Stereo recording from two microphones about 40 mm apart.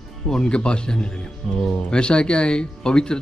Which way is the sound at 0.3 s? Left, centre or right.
Left.